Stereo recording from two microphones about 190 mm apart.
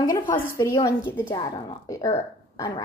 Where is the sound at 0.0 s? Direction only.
20° left (ahead or behind).